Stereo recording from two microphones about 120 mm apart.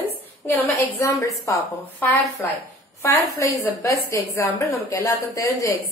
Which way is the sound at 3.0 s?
25° left (ahead or behind).